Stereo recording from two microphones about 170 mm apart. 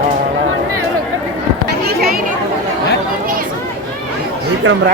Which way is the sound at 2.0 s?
60° right (ahead or behind).